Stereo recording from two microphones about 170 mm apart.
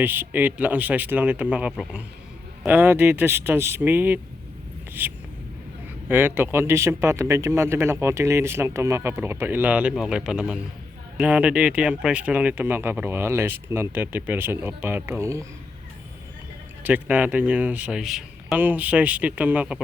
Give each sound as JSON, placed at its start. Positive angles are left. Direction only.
{"t": 0.0, "sound": "speech", "side_deg": -10}
{"t": 16.8, "sound": "speech", "side_deg": -10}